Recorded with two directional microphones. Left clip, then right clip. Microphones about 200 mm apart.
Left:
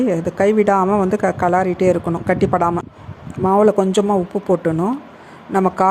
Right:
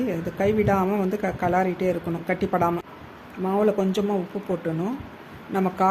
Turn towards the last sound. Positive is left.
turn(degrees=25)  # may be behind; listen again after turning